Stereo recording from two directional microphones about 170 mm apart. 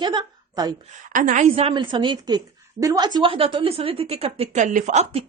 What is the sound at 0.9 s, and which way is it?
A woman's voice, 50° right (ahead or behind).